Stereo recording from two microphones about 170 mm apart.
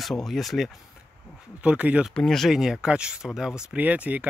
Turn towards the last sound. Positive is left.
turn(degrees=-10)  # may be behind; listen again after turning